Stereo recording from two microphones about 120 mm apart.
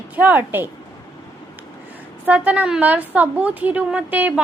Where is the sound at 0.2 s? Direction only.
15° right (ahead or behind).